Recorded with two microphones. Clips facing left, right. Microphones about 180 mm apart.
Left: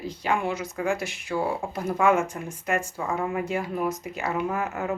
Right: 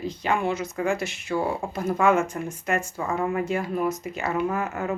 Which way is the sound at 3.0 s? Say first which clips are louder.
Right 2 dB; centre (ahead or behind).